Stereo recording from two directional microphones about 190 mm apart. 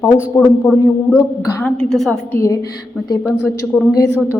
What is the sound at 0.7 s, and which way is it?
A woman's voice, 5° right (ahead or behind).